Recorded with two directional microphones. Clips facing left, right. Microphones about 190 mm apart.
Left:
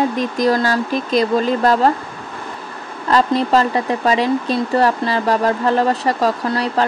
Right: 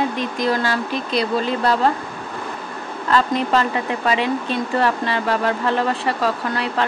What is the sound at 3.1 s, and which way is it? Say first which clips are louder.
Speech: left 4 dB; 35° left (ahead or behind).